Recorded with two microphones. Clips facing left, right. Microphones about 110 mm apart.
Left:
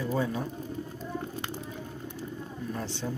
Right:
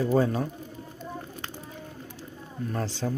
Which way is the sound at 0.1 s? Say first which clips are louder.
Right 5 dB; 60° right (ahead or behind).